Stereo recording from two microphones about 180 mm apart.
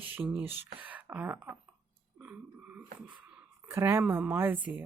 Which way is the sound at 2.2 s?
10° right (ahead or behind).